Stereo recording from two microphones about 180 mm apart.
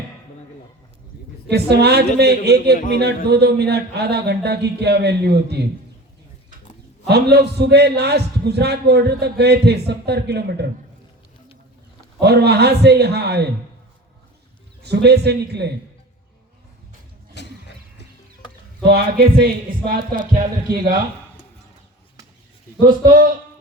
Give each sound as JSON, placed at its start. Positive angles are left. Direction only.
{"t": 1.5, "sound": "a man's voice", "side_deg": -65}
{"t": 7.1, "sound": "a man's voice", "side_deg": -65}
{"t": 12.2, "sound": "a man's voice", "side_deg": -65}
{"t": 14.8, "sound": "a man's voice", "side_deg": -65}
{"t": 17.4, "sound": "a sound", "side_deg": 75}
{"t": 18.8, "sound": "speech", "side_deg": -60}